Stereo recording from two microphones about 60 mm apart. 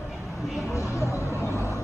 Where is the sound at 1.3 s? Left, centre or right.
Left.